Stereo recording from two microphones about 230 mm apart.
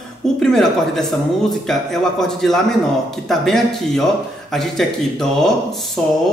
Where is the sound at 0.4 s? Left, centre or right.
Centre.